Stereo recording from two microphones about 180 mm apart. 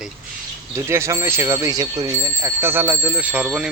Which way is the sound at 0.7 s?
15° right (ahead or behind).